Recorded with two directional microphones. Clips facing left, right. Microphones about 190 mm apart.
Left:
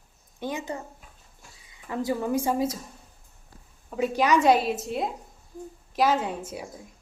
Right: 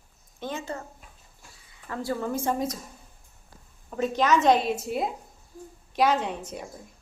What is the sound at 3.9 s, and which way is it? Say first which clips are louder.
A woman's voice: even; 10° left (ahead or behind).